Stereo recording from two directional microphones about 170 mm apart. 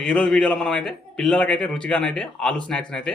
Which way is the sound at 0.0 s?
5° left (ahead or behind).